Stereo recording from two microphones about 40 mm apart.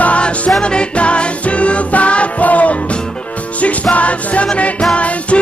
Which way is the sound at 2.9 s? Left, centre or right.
Left.